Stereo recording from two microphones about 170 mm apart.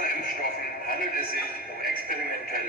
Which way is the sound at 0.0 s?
55° left (ahead or behind).